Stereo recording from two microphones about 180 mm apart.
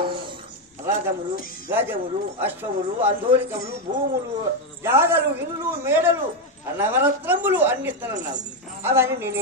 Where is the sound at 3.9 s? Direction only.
45° right (ahead or behind).